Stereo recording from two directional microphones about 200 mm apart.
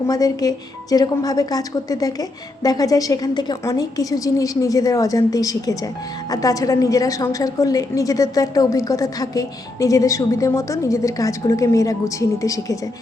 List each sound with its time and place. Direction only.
0.1 s a woman's voice: 20° left (ahead or behind)